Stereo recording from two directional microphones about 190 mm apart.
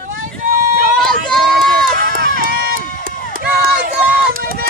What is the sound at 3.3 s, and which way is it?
Run, 50° right (ahead or behind).